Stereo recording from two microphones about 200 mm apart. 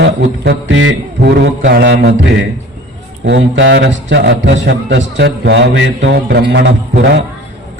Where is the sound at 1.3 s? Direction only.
55° right (ahead or behind).